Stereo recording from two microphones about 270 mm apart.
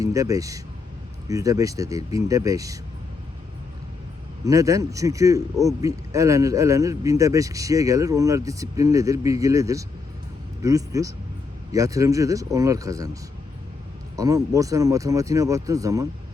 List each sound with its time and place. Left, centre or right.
0.0 s a man's voice: centre
4.4 s a man's voice: centre
14.2 s a man's voice: centre